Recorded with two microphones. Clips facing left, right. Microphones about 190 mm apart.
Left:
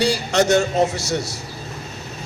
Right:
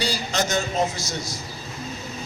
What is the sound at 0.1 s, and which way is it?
Speech, 70° left (ahead or behind).